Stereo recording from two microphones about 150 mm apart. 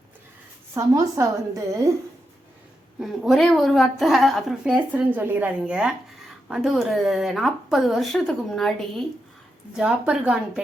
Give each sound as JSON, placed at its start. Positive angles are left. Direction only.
{"t": 0.7, "sound": "a woman's voice", "side_deg": -20}
{"t": 3.0, "sound": "a woman's voice", "side_deg": 0}